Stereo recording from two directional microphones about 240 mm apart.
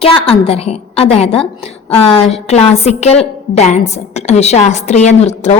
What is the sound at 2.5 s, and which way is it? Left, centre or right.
A woman's voice, left.